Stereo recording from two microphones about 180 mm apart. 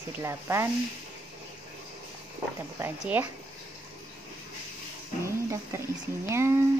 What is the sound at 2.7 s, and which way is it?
Music, 10° right (ahead or behind).